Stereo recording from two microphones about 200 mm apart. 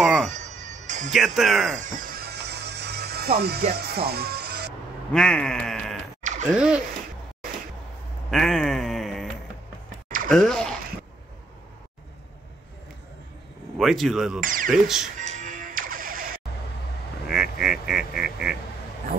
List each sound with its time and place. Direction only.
0.0 s music: centre (ahead or behind)
0.3 s music: 35° right (ahead or behind)
1.1 s speech: centre (ahead or behind)
1.8 s music: 40° right (ahead or behind)
5.1 s speech: 5° left (ahead or behind)
8.3 s a sound: centre (ahead or behind)
10.0 s a sound: 40° right (ahead or behind)
10.3 s speech: 5° left (ahead or behind)
13.7 s speech: centre (ahead or behind)
14.4 s speech: 45° right (ahead or behind)
14.7 s speech: centre (ahead or behind)
15.1 s music: 40° right (ahead or behind)
17.3 s quack: 5° right (ahead or behind)